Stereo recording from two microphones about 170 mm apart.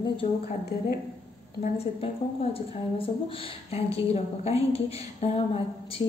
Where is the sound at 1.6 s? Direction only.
35° left (ahead or behind).